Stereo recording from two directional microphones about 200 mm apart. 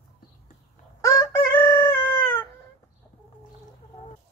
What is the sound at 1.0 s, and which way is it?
Chicken, 15° left (ahead or behind).